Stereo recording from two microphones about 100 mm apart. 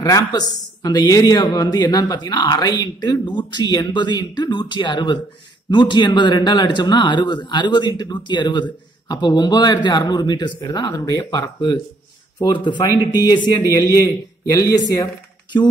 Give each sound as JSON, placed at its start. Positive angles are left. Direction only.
{"t": 0.0, "sound": "speech", "side_deg": 40}
{"t": 11.1, "sound": "speech", "side_deg": 30}
{"t": 12.4, "sound": "a man's voice", "side_deg": 50}